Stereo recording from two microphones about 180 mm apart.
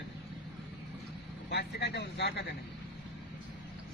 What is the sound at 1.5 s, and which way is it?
Speech, 65° left (ahead or behind).